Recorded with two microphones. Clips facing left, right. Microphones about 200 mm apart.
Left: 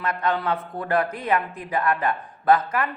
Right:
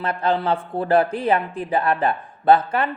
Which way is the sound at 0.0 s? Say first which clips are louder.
Right 3 dB; 30° right (ahead or behind).